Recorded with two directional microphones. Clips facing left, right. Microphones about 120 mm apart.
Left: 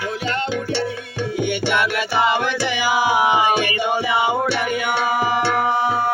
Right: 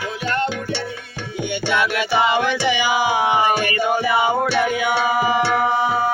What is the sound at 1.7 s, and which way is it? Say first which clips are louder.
Music: right 5 dB; centre (ahead or behind).